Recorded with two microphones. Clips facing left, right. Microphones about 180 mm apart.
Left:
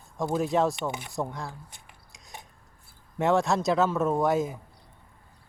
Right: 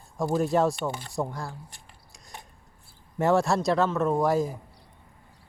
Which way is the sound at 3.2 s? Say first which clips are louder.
Right 1 dB; centre (ahead or behind).